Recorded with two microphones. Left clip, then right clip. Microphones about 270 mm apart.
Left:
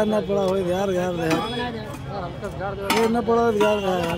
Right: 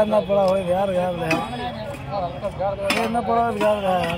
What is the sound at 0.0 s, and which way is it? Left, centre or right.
Speech, centre.